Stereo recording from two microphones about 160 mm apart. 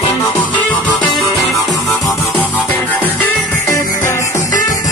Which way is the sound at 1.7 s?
Centre (ahead or behind).